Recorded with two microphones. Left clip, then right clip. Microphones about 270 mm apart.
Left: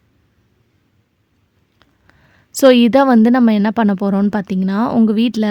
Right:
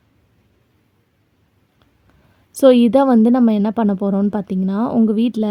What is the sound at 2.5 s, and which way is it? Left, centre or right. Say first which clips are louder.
A woman's voice: left 2 dB; left.